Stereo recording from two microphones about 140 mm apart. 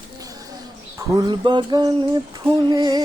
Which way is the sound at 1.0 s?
30° right (ahead or behind).